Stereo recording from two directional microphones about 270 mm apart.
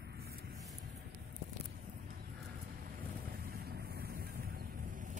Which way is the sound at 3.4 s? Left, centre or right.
Right.